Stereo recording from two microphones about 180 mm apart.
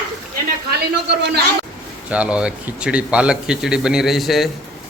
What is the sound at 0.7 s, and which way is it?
Speech, 70° right (ahead or behind).